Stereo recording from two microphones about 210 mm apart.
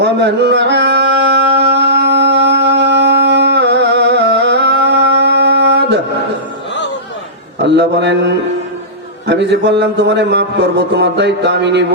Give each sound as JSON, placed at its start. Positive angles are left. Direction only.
{"t": 0.0, "sound": "music", "side_deg": -50}
{"t": 7.6, "sound": "a man's voice", "side_deg": -55}